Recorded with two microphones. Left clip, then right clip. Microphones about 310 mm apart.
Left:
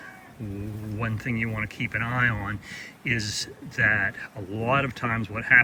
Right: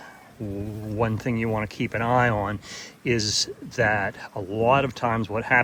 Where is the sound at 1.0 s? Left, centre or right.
Centre.